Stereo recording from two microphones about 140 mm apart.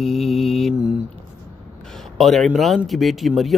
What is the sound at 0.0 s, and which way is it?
Mantra, centre (ahead or behind).